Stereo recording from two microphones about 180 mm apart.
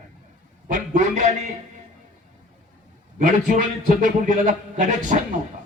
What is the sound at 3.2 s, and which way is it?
A man's voice, 45° right (ahead or behind).